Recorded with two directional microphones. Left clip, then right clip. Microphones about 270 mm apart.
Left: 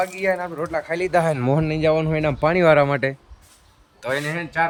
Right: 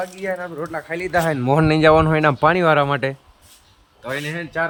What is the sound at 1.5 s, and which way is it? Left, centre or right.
Speech, centre.